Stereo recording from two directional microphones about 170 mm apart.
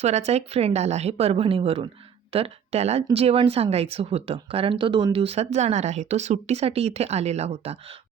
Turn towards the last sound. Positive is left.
turn(degrees=-35)  # may be behind; listen again after turning